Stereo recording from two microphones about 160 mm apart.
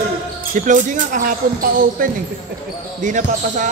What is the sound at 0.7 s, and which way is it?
Speech, 55° right (ahead or behind).